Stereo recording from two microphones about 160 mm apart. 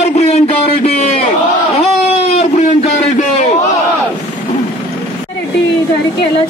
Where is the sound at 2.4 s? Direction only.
45° left (ahead or behind).